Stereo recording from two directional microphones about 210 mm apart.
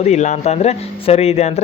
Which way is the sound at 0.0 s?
35° left (ahead or behind).